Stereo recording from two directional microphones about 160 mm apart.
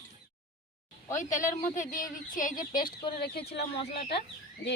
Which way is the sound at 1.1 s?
55° left (ahead or behind).